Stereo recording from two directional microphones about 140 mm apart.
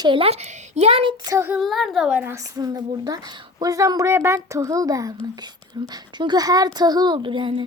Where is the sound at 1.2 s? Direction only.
25° right (ahead or behind).